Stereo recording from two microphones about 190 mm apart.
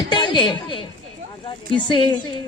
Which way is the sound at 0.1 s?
25° left (ahead or behind).